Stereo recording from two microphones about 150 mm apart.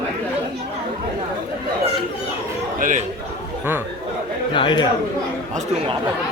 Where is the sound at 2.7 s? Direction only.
65° right (ahead or behind).